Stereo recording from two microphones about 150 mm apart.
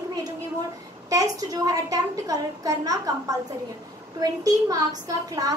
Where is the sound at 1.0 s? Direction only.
25° right (ahead or behind).